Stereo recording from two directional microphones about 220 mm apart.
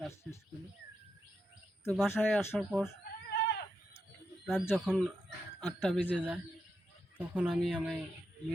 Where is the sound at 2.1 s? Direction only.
10° left (ahead or behind).